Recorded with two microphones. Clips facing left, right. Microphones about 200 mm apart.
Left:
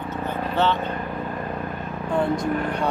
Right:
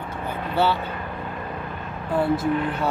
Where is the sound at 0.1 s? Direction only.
10° right (ahead or behind).